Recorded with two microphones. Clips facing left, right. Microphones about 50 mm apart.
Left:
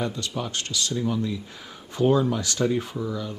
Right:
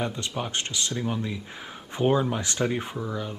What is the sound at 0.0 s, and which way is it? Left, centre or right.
Speech, right.